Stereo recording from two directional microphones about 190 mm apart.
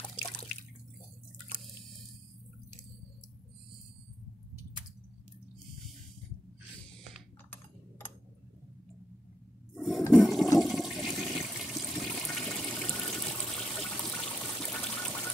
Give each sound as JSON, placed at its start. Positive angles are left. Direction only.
{"t": 0.0, "sound": "water", "side_deg": 20}
{"t": 9.8, "sound": "toilet flush", "side_deg": 0}